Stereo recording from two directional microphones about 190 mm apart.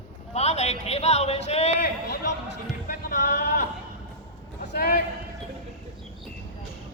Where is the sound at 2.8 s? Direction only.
50° left (ahead or behind).